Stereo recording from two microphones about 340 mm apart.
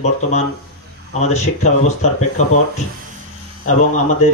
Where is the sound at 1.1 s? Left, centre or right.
Centre.